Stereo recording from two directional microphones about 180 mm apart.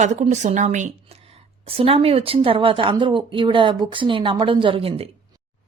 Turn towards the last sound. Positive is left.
turn(degrees=-30)  # may be behind; listen again after turning